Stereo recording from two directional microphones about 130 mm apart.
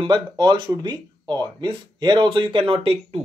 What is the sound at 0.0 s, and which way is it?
A man's voice, 35° right (ahead or behind).